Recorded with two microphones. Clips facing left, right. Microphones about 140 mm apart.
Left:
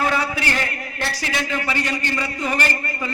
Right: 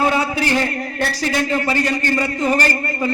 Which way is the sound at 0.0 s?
25° right (ahead or behind).